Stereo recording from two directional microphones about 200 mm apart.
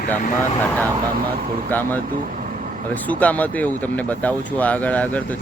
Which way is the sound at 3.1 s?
10° left (ahead or behind).